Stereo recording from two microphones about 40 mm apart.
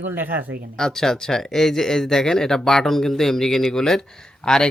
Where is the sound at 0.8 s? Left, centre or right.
Centre.